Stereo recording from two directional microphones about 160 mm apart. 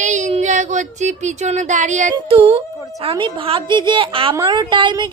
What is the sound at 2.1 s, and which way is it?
A woman's voice, 35° right (ahead or behind).